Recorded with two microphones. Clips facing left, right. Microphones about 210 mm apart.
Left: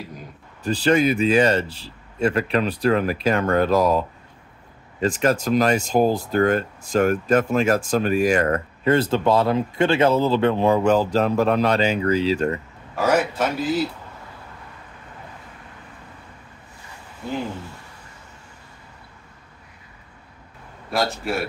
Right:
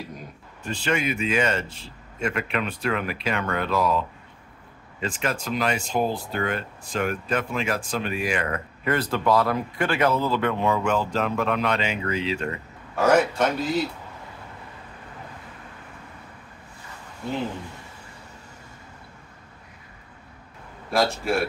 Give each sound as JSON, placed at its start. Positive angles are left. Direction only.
{"t": 0.7, "sound": "speech", "side_deg": 35}
{"t": 5.0, "sound": "speech", "side_deg": 40}
{"t": 8.8, "sound": "speech", "side_deg": 25}
{"t": 12.9, "sound": "a man's voice", "side_deg": 0}
{"t": 20.9, "sound": "a man's voice", "side_deg": 0}